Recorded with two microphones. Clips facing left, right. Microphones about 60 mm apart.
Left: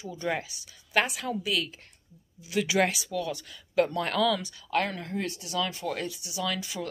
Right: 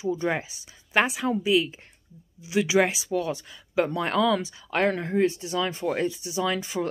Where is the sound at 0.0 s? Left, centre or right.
Right.